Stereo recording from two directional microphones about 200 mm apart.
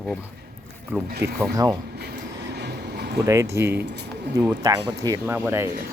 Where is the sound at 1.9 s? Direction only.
55° right (ahead or behind).